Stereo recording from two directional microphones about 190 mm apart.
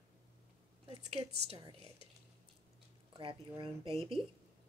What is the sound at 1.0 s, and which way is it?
Speech, 35° right (ahead or behind).